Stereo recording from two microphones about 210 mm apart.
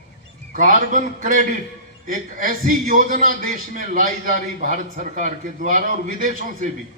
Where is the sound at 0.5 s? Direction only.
40° right (ahead or behind).